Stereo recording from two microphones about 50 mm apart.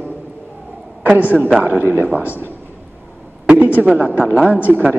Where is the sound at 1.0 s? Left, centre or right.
Right.